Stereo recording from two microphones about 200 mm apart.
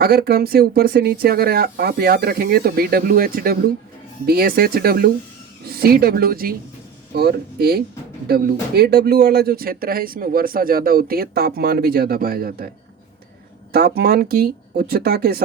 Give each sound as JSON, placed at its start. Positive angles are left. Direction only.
{"t": 0.0, "sound": "speech", "side_deg": -50}
{"t": 13.7, "sound": "speech", "side_deg": -50}